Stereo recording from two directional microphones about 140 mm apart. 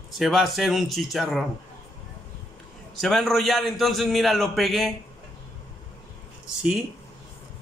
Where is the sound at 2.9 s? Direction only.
Centre (ahead or behind).